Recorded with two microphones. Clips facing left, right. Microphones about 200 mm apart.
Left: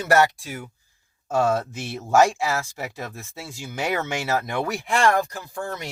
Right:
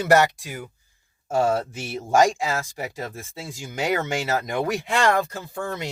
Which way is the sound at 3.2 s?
15° right (ahead or behind).